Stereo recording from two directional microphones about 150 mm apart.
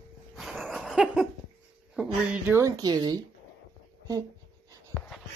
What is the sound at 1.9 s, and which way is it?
Speech, 5° right (ahead or behind).